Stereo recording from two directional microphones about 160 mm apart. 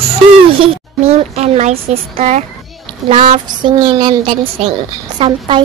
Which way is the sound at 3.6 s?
35° right (ahead or behind).